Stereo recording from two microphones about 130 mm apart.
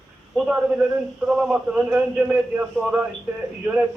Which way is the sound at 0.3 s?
5° right (ahead or behind).